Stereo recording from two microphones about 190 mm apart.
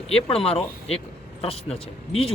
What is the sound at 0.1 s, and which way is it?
Speech, 30° left (ahead or behind).